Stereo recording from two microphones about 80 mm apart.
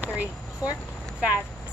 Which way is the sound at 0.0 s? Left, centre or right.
Centre.